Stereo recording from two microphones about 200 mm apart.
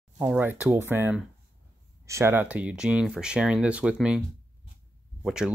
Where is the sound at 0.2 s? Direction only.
10° right (ahead or behind).